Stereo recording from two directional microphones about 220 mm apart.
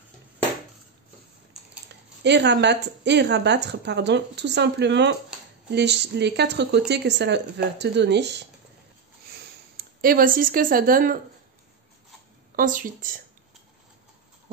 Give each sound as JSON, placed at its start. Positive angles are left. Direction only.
{"t": 2.2, "sound": "speech", "side_deg": -50}
{"t": 9.3, "sound": "a sound", "side_deg": -40}
{"t": 12.5, "sound": "speech", "side_deg": -40}